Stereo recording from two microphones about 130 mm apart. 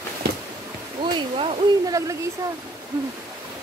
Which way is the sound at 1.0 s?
40° right (ahead or behind).